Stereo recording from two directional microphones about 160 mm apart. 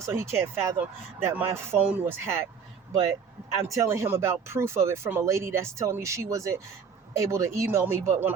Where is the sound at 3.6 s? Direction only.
20° right (ahead or behind).